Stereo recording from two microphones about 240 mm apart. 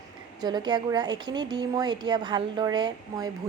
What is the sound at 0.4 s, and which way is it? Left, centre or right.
A woman's voice, centre.